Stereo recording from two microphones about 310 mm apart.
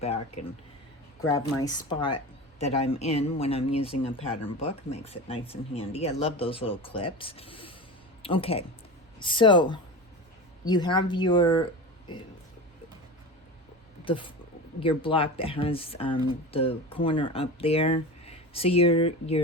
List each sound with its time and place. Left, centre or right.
1.6 s speech: centre
14.0 s speech: centre